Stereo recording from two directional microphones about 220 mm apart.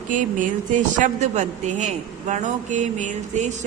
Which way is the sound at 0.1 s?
35° right (ahead or behind).